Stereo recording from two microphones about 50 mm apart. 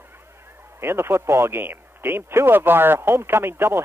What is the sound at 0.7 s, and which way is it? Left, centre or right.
Speech, right.